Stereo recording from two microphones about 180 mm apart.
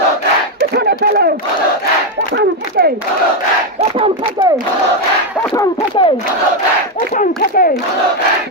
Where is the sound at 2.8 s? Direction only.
60° right (ahead or behind).